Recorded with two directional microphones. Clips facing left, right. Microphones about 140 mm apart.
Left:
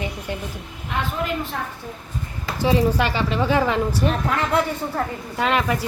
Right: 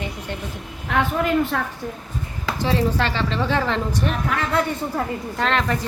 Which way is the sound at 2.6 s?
15° left (ahead or behind).